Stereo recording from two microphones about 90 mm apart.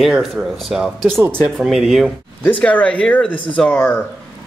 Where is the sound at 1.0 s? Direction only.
30° right (ahead or behind).